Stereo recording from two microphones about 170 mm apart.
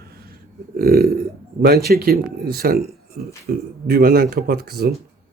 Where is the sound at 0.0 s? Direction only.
60° right (ahead or behind).